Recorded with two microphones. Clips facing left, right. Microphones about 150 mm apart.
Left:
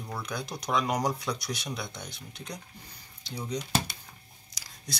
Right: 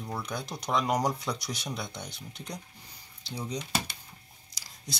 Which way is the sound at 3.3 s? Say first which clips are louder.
Left 1 dB; 10° right (ahead or behind).